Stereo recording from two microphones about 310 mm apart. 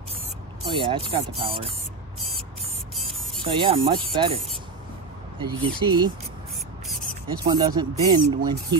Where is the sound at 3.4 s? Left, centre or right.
Centre.